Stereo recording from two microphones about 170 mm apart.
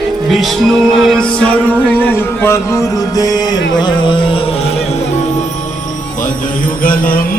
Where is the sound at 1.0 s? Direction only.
5° left (ahead or behind).